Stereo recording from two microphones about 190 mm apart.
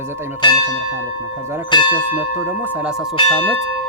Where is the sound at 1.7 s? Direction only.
25° left (ahead or behind).